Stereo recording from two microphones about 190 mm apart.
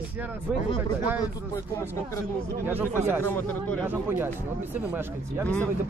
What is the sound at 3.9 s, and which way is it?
Speech, 10° right (ahead or behind).